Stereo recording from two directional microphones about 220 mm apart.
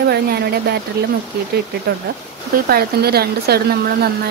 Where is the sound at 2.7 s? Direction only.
45° right (ahead or behind).